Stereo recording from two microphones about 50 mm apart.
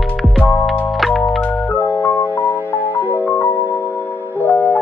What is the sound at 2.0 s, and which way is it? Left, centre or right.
Music, left.